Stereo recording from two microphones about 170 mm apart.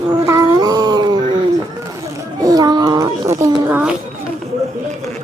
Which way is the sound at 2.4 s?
20° right (ahead or behind).